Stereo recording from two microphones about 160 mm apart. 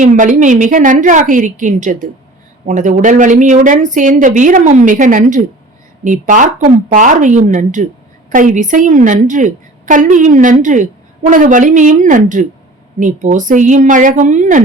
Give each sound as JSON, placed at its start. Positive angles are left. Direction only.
{"t": 0.0, "sound": "a woman's voice", "side_deg": -50}